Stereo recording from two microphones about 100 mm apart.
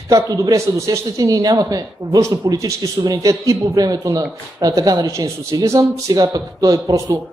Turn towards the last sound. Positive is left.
turn(degrees=-35)  # may be behind; listen again after turning